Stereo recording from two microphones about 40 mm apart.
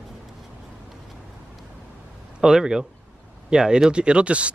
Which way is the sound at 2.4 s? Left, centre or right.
Centre.